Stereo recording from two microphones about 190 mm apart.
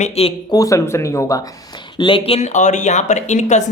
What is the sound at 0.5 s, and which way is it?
Speech, 15° left (ahead or behind).